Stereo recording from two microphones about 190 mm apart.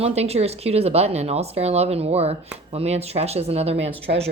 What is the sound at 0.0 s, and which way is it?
Speech, 35° right (ahead or behind).